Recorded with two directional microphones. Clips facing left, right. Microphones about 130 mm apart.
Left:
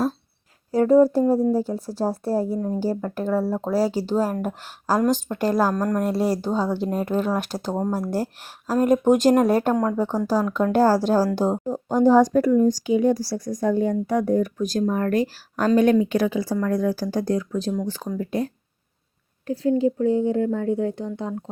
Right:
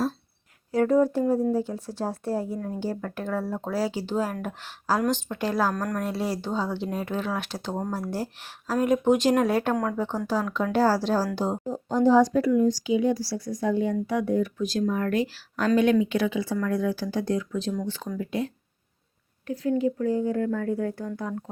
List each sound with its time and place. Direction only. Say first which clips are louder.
0.7 s speech: left 5 dB; 35° left (ahead or behind)
5.7 s speech: left 6 dB; 30° left (ahead or behind)